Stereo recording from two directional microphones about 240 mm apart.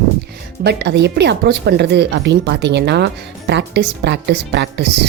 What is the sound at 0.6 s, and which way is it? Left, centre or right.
Speech, right.